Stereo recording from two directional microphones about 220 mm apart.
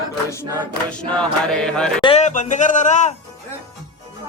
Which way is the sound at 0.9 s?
5° left (ahead or behind).